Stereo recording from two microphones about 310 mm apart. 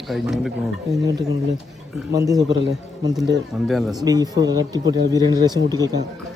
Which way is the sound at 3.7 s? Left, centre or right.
Centre.